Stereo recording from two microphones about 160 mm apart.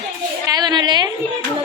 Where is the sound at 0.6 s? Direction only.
25° right (ahead or behind).